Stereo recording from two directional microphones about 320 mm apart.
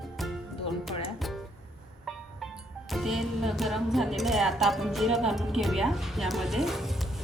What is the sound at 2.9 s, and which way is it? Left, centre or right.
Speech, centre.